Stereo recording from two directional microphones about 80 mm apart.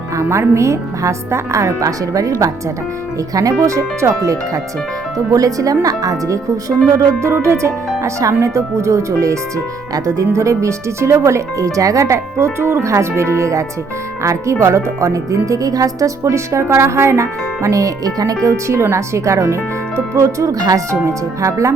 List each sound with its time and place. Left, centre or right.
0.2 s speech: right
3.3 s speech: right